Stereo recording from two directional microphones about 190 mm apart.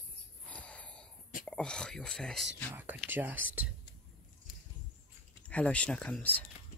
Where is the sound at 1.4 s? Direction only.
5° left (ahead or behind).